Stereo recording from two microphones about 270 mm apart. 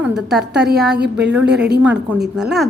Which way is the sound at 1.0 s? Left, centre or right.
Right.